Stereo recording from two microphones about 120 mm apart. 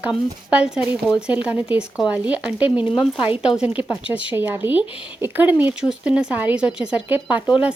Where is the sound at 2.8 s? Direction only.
45° left (ahead or behind).